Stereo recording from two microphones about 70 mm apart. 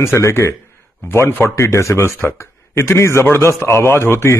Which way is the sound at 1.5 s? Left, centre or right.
Left.